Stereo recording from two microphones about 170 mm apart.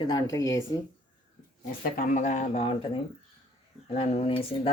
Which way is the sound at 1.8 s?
50° left (ahead or behind).